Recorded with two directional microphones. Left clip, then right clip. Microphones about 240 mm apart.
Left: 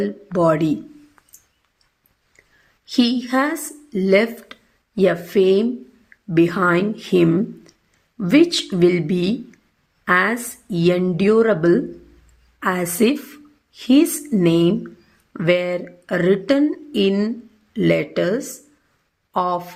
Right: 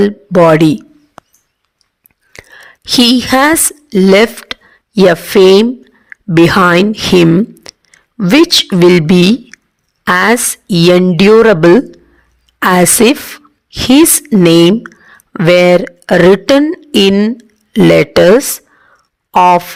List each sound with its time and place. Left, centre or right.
0.0 s speech: right
2.8 s a woman's voice: right